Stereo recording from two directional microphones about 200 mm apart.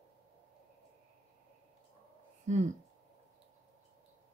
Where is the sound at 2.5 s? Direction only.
35° right (ahead or behind).